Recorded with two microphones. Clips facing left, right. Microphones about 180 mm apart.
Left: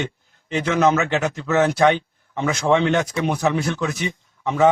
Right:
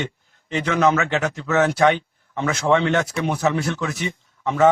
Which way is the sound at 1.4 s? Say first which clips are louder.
Left 1 dB; 5° left (ahead or behind).